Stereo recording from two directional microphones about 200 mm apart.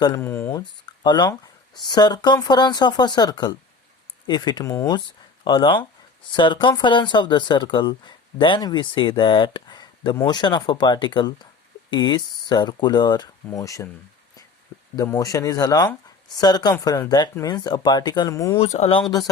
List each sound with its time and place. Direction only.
0.0 s a sound: 15° left (ahead or behind)
0.9 s speech: 20° left (ahead or behind)
14.9 s speech: 15° left (ahead or behind)
18.6 s speech: 30° left (ahead or behind)